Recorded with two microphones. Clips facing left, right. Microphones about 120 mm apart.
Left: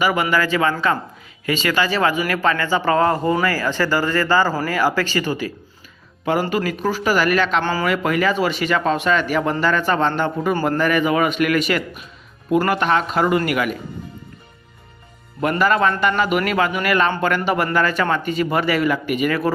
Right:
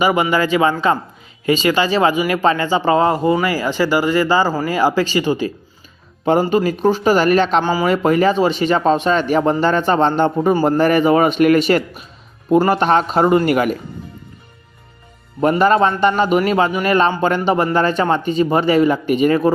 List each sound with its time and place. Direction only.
0.0 s speech: 20° right (ahead or behind)
6.5 s speech: 25° right (ahead or behind)
7.6 s speech: 10° right (ahead or behind)
7.9 s a man's voice: 30° right (ahead or behind)
15.4 s speech: 30° right (ahead or behind)